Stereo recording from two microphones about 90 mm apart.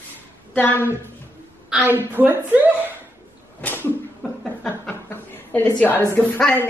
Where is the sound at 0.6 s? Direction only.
20° left (ahead or behind).